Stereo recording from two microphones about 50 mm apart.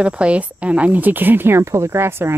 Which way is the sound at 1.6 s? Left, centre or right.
Right.